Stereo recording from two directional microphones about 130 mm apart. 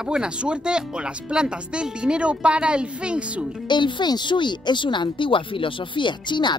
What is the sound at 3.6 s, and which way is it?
Speech, 35° left (ahead or behind).